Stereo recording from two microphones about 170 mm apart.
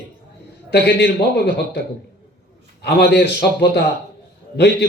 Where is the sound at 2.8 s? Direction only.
75° left (ahead or behind).